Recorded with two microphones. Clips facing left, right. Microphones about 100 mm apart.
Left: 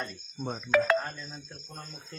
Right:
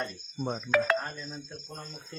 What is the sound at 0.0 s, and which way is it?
A man's voice, 5° right (ahead or behind).